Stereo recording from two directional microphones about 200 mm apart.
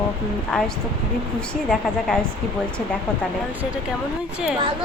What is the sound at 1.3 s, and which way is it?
Speech, 5° left (ahead or behind).